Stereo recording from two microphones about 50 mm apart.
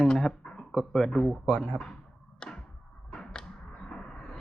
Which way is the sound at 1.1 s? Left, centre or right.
Centre.